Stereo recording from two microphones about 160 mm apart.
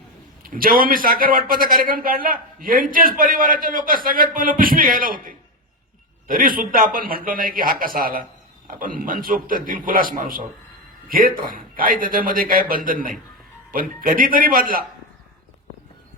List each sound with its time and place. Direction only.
0.4 s a man's voice: 60° right (ahead or behind)